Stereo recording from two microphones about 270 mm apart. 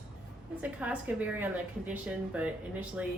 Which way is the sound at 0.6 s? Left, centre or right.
Centre.